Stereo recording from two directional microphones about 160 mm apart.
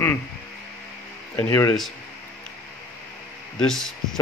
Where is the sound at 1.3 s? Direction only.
15° left (ahead or behind).